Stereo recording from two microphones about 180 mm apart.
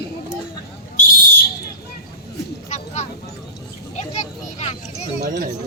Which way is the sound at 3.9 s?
40° left (ahead or behind).